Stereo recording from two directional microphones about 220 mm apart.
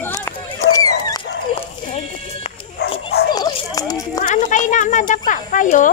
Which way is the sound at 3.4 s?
15° left (ahead or behind).